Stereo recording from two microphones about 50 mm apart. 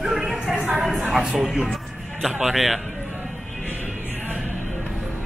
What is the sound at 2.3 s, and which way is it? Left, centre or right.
Speech, centre.